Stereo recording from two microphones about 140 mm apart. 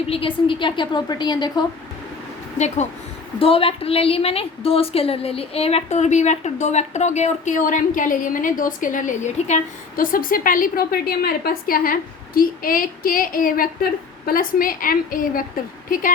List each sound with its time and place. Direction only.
0.1 s a woman's voice: 40° left (ahead or behind)
2.6 s speech: 55° left (ahead or behind)
3.3 s a woman's voice: 40° left (ahead or behind); by 15.4 s 90° left
15.9 s a woman's voice: 75° left (ahead or behind)